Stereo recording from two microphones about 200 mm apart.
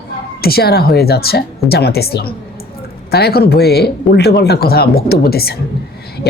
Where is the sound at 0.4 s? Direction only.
50° left (ahead or behind).